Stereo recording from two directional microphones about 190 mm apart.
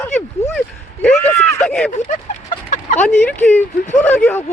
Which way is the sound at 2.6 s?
40° left (ahead or behind).